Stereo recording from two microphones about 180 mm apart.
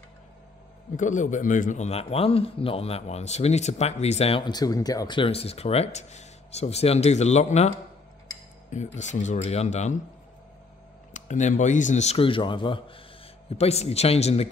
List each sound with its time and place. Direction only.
0.9 s speech: 45° left (ahead or behind)
11.1 s speech: 40° left (ahead or behind)